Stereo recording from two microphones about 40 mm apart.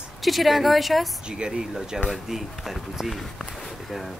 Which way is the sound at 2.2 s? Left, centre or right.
Centre.